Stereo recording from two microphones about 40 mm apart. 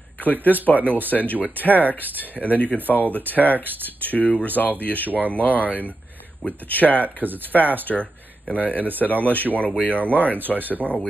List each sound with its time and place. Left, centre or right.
0.2 s speech: left
3.5 s speech: right
4.0 s speech: left